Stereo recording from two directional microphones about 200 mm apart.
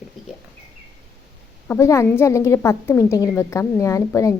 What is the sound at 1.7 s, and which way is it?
A woman's voice, 15° left (ahead or behind).